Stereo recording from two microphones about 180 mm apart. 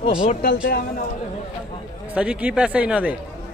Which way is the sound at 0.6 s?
55° left (ahead or behind).